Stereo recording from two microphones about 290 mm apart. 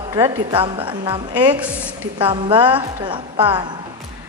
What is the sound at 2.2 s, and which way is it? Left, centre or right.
A woman's voice, centre.